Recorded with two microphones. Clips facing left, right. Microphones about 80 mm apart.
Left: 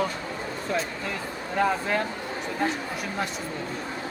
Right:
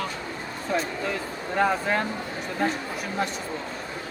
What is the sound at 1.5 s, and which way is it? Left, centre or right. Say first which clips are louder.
Speech: right 1 dB; centre.